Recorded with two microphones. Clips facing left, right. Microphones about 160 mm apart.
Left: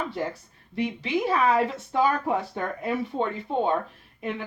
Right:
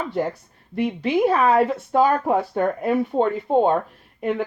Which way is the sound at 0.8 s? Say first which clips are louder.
Right 7 dB; 55° right (ahead or behind).